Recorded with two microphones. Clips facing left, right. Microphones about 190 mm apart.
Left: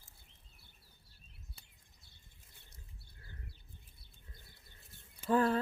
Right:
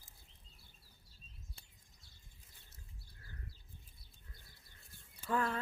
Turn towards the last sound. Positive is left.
turn(degrees=30)  # may be behind; listen again after turning